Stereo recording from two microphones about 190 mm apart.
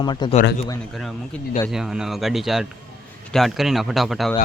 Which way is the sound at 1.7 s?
5° right (ahead or behind).